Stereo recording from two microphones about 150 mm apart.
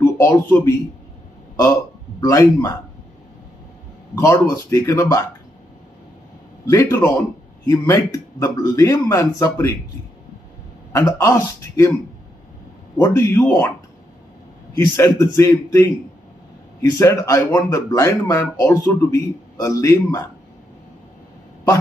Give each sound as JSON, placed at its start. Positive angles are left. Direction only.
{"t": 0.0, "sound": "speech", "side_deg": 15}
{"t": 1.6, "sound": "speech", "side_deg": 20}
{"t": 4.1, "sound": "speech", "side_deg": 20}
{"t": 6.6, "sound": "speech", "side_deg": 20}
{"t": 10.9, "sound": "speech", "side_deg": 20}
{"t": 13.0, "sound": "a man's voice", "side_deg": 15}
{"t": 15.0, "sound": "speech", "side_deg": 25}
{"t": 17.0, "sound": "speech", "side_deg": 20}